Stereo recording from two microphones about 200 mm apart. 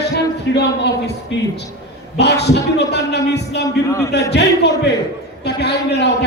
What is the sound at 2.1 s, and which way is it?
A man's voice, 55° left (ahead or behind).